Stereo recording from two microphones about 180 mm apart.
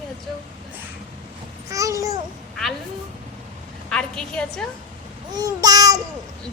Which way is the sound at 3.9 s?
5° left (ahead or behind).